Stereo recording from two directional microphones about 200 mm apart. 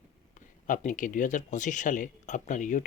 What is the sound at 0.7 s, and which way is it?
Speech, 40° left (ahead or behind).